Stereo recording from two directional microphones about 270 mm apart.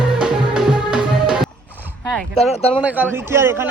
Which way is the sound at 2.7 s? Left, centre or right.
Centre.